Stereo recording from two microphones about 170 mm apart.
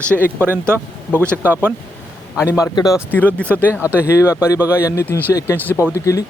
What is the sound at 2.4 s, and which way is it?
Speech, 15° left (ahead or behind).